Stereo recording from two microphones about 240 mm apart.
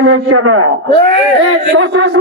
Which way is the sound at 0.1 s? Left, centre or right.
Right.